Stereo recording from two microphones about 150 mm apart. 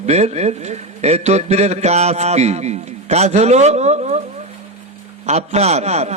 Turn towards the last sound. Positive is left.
turn(degrees=-45)  # may be behind; listen again after turning